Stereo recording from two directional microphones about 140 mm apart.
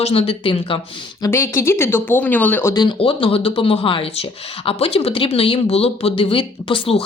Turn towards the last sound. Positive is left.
turn(degrees=40)  # may be behind; listen again after turning